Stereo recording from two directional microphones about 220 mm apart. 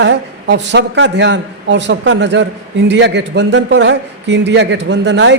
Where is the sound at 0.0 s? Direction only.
55° right (ahead or behind).